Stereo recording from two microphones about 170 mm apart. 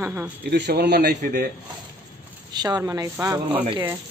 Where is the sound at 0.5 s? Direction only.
75° right (ahead or behind).